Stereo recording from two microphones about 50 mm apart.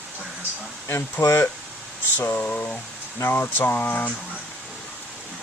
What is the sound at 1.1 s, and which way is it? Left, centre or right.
Speech, left.